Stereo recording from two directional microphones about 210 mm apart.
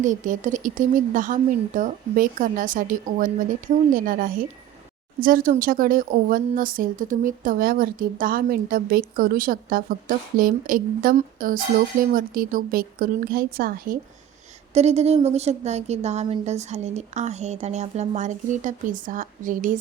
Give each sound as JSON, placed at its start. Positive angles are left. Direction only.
{"t": 0.0, "sound": "a woman's voice", "side_deg": -35}
{"t": 14.7, "sound": "a woman's voice", "side_deg": -30}